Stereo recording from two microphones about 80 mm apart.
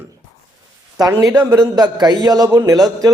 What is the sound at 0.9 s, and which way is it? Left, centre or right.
A man's voice, right.